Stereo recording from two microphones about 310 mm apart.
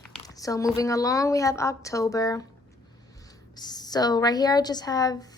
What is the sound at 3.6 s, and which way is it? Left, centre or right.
A woman's voice, centre.